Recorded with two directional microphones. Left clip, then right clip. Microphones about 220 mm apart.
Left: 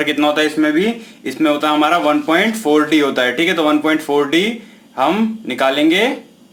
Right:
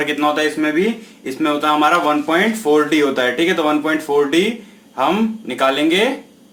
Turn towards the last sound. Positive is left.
turn(degrees=20)  # may be behind; listen again after turning